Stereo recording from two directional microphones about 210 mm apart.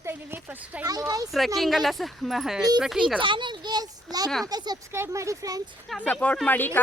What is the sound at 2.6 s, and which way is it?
Speech, 20° right (ahead or behind).